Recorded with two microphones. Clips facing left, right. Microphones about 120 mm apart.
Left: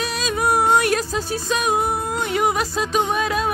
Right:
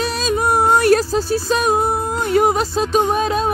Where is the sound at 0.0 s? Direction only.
35° right (ahead or behind).